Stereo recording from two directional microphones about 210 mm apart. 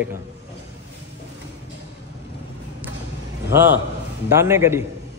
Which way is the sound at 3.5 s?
10° right (ahead or behind).